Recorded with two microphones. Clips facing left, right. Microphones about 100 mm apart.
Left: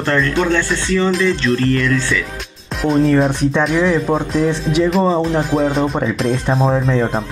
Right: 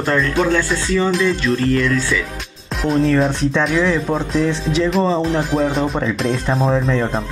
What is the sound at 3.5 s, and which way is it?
Speech, 10° left (ahead or behind).